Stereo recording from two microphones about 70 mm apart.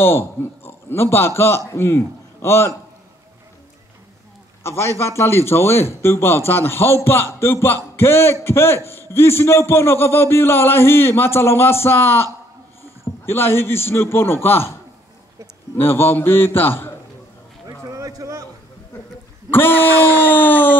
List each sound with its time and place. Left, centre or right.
0.0 s a man's voice: left
4.6 s a man's voice: left
15.7 s a man's voice: left
17.8 s a sound: right
19.5 s speech: left